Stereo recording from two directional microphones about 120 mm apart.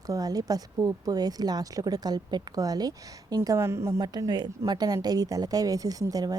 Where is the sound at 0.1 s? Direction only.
30° right (ahead or behind).